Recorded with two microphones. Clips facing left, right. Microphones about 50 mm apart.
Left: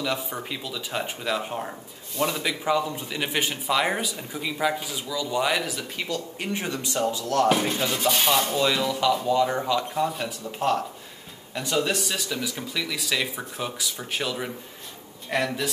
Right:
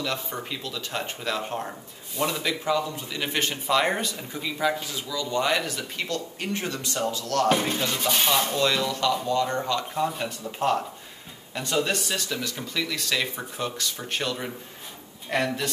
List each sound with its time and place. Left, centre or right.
0.0 s dishes: centre
2.6 s a man's voice: centre
7.4 s dishes: centre